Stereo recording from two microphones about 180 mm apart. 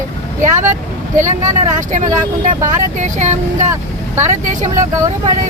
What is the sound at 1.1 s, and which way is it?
Speech, 45° right (ahead or behind).